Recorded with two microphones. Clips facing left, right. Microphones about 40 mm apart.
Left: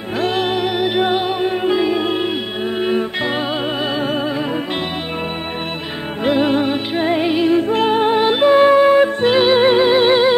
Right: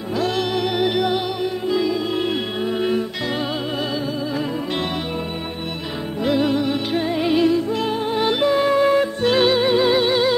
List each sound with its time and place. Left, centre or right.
0.2 s music: left
0.7 s music: centre
0.9 s music: left
2.8 s music: left
6.2 s music: left
7.2 s music: left
7.5 s music: left
8.2 s music: left
9.6 s music: left